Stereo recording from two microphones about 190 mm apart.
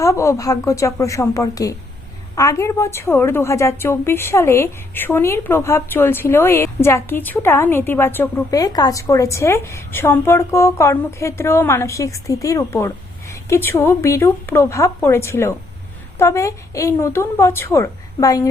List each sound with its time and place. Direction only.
0.0 s a woman's voice: 15° left (ahead or behind)